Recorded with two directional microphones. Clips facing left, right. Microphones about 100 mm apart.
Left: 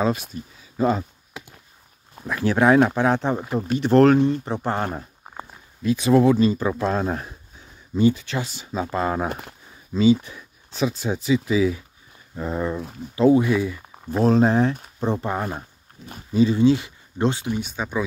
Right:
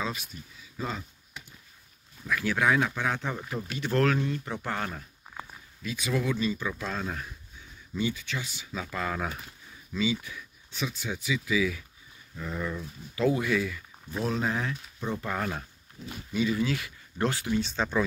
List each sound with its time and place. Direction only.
0.0 s speech: 45° left (ahead or behind)
2.2 s speech: 35° left (ahead or behind)
9.3 s speech: 60° left (ahead or behind)
9.9 s speech: 35° left (ahead or behind)
13.9 s speech: 40° left (ahead or behind); by 15.6 s 25° left (ahead or behind)
16.1 s speech: 35° left (ahead or behind); by 18.0 s 10° left (ahead or behind)